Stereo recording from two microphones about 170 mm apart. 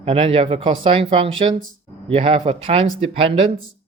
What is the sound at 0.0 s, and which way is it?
Speech, 35° right (ahead or behind).